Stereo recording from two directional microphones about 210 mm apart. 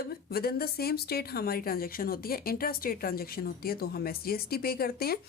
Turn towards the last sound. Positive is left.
turn(degrees=45)  # may be behind; listen again after turning